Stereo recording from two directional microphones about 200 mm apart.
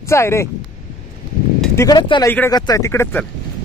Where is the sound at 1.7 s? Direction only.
20° left (ahead or behind).